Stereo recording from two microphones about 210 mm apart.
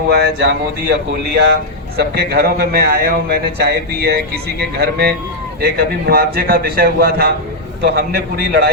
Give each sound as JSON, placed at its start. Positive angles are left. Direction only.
{"t": 0.1, "sound": "a man's voice", "side_deg": -50}